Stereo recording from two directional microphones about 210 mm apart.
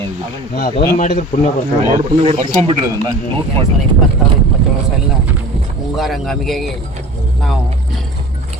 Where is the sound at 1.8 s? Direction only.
30° right (ahead or behind).